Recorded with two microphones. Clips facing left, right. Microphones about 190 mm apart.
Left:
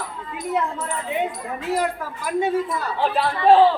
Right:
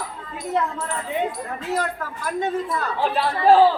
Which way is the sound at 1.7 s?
10° left (ahead or behind).